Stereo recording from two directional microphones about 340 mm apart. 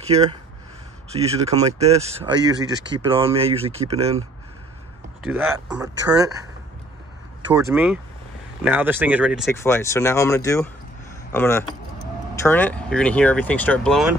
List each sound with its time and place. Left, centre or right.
0.0 s speech: centre
5.2 s speech: centre
7.4 s speech: centre